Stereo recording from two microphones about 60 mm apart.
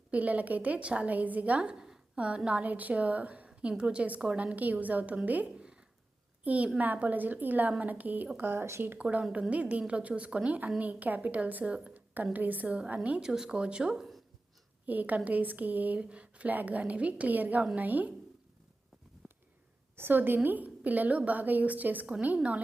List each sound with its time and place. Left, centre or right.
0.1 s a woman's voice: right
5.5 s a sound: centre
6.4 s a woman's voice: right
8.4 s speech: right
8.8 s a woman's voice: right; by 14.2 s centre
14.8 s a woman's voice: right
19.2 s a sound: centre
20.0 s a woman's voice: right